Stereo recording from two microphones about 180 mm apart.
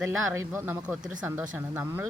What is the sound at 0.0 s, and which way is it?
Speech, 15° right (ahead or behind).